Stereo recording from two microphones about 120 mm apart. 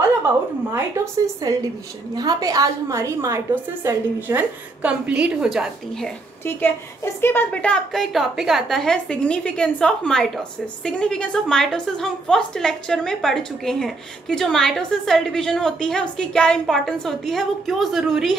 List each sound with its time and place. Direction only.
0.7 s a woman's voice: 25° right (ahead or behind); by 6.1 s centre (ahead or behind)
7.2 s a woman's voice: 20° left (ahead or behind); by 18.4 s centre (ahead or behind)